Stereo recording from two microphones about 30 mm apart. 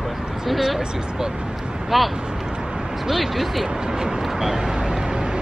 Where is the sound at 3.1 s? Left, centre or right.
Centre.